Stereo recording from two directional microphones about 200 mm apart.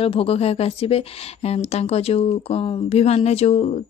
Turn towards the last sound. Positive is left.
turn(degrees=30)  # may be behind; listen again after turning